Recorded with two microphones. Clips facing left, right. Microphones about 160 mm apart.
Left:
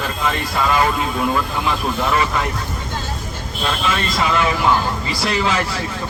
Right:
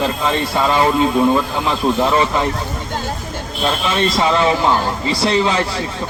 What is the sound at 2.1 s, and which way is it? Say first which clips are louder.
Speech: right 3 dB; 25° right (ahead or behind).